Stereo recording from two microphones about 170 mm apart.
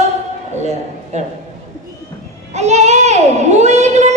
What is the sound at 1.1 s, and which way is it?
Speech, 45° right (ahead or behind).